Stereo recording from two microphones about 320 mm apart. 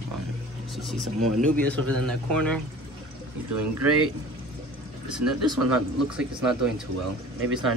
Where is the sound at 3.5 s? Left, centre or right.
Right.